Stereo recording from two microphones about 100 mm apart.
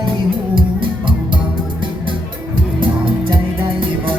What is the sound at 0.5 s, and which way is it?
Music, 55° right (ahead or behind).